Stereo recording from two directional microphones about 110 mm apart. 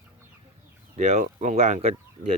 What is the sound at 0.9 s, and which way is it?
Speech, 90° right.